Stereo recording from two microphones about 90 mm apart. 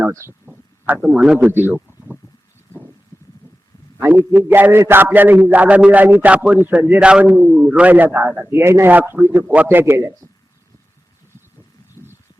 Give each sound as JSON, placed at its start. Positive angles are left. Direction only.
{"t": 0.0, "sound": "a man's voice", "side_deg": -30}
{"t": 0.9, "sound": "a man's voice", "side_deg": -5}
{"t": 1.4, "sound": "a man's voice", "side_deg": -20}
{"t": 4.0, "sound": "a man's voice", "side_deg": -25}
{"t": 12.0, "sound": "a sound", "side_deg": 30}